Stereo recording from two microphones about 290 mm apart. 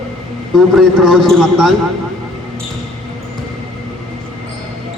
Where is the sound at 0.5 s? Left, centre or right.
Centre.